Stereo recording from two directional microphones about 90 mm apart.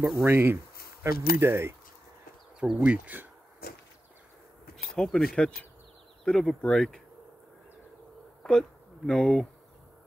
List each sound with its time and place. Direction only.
0.2 s speech: 25° right (ahead or behind)
2.6 s speech: 10° right (ahead or behind)
4.9 s speech: 5° left (ahead or behind)
8.4 s speech: 5° left (ahead or behind)